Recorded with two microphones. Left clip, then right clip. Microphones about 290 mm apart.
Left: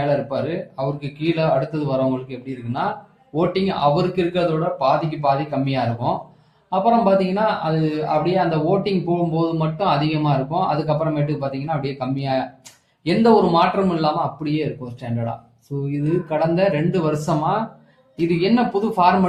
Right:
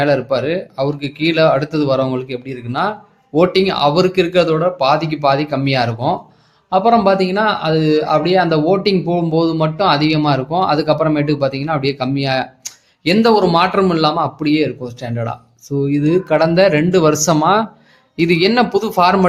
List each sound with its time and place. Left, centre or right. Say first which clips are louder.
0.0 s speech: right 6 dB; right
3.3 s speech: right 7 dB; right
15.8 s speech: right 8 dB; right